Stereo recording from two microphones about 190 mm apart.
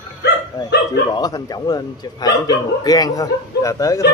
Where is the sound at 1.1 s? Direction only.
20° left (ahead or behind).